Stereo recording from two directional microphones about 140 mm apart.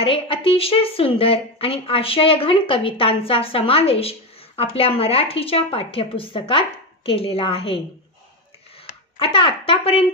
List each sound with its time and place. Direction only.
0.0 s a woman's voice: 40° left (ahead or behind)
9.2 s a woman's voice: 40° left (ahead or behind)